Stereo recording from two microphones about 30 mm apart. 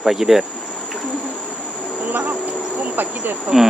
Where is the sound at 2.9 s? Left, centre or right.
Right.